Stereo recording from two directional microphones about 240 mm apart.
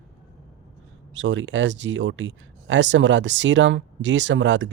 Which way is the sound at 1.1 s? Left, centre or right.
Right.